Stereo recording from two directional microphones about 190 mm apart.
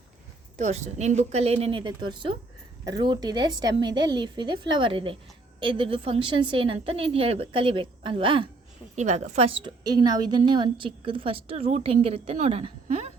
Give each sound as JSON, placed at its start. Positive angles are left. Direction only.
{"t": 0.5, "sound": "a woman's voice", "side_deg": -35}
{"t": 9.0, "sound": "a woman's voice", "side_deg": -35}